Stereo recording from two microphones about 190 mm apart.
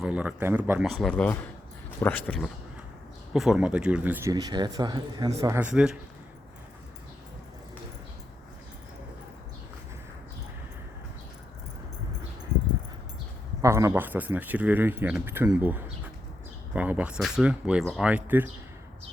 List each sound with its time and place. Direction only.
0.0 s speech: 5° right (ahead or behind)
0.9 s speech: 5° left (ahead or behind); by 5.6 s 15° right (ahead or behind)
5.7 s speech: 5° right (ahead or behind)
12.5 s a sound: 30° left (ahead or behind)
13.6 s speech: 15° right (ahead or behind)